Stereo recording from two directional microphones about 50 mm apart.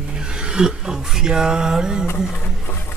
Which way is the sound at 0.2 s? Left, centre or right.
Centre.